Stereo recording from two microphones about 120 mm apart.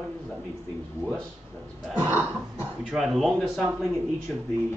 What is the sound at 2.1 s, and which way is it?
Throat clearing, 15° right (ahead or behind).